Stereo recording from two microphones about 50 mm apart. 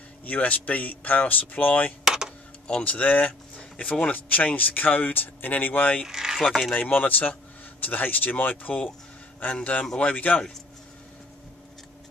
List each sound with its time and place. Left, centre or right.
0.2 s speech: left
2.0 s a sound: centre
2.8 s speech: left
6.0 s speech: centre
6.4 s speech: centre
6.7 s speech: left